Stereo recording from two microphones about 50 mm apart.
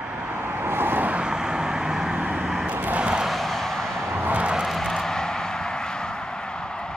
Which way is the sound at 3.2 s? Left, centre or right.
Centre.